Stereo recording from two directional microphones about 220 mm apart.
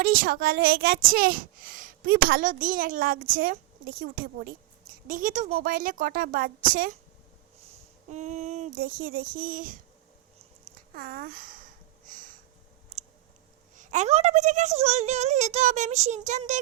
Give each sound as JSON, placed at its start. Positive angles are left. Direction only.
{"t": 0.0, "sound": "a child's voice", "side_deg": -40}
{"t": 8.1, "sound": "a child's voice", "side_deg": -30}
{"t": 10.9, "sound": "sniff", "side_deg": -40}
{"t": 12.9, "sound": "clicking", "side_deg": -30}
{"t": 13.7, "sound": "a child's voice", "side_deg": -35}